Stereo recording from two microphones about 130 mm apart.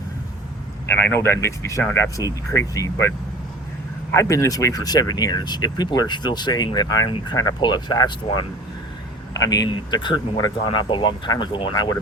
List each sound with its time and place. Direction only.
0.9 s speech: 15° left (ahead or behind)
4.1 s speech: 25° left (ahead or behind)